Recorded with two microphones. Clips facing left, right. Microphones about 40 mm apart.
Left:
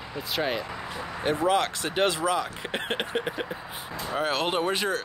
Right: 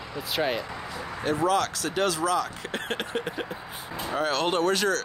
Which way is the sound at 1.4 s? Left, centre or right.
Left.